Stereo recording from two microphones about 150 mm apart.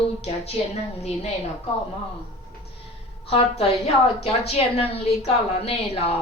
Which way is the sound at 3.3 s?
40° left (ahead or behind).